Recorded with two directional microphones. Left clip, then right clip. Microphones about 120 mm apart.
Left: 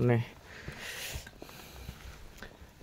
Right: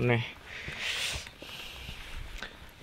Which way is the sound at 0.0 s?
45° left (ahead or behind).